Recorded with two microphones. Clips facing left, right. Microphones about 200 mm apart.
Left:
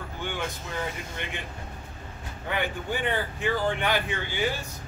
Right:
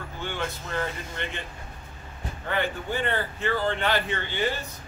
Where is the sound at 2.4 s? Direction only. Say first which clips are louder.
Right 1 dB; 15° left (ahead or behind).